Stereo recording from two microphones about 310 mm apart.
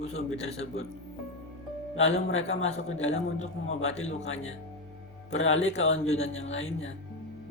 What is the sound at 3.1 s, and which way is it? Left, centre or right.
Speech, left.